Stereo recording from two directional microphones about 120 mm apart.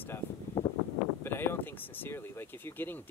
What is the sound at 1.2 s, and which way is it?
Speech, 20° left (ahead or behind).